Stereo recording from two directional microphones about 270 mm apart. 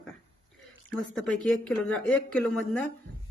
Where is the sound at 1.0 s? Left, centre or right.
Centre.